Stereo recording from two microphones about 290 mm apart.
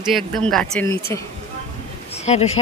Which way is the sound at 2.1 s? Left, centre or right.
Left.